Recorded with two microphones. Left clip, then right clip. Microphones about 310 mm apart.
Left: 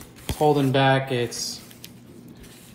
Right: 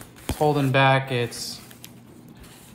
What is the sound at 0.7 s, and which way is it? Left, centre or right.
Speech, right.